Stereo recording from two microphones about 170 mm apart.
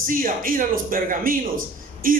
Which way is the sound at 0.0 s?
55° right (ahead or behind).